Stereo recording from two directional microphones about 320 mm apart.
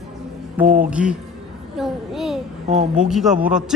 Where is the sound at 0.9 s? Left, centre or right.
Centre.